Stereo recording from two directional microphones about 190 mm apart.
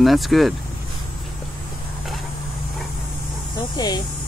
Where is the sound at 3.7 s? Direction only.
20° left (ahead or behind).